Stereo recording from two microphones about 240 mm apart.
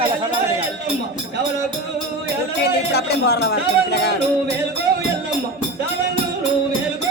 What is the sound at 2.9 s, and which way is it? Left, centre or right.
Speech, left.